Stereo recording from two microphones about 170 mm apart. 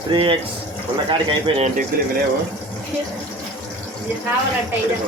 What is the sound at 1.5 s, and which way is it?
Speech, 40° right (ahead or behind).